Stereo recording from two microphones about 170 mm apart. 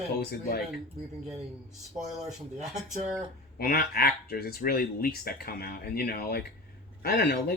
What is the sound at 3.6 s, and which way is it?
Speech, 60° left (ahead or behind).